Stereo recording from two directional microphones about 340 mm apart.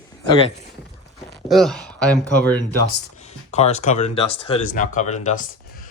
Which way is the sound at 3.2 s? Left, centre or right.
Centre.